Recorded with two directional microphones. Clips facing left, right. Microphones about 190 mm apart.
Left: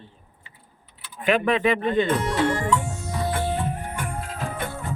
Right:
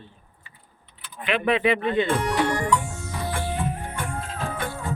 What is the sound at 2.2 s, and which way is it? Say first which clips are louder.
Music: even; 25° left (ahead or behind).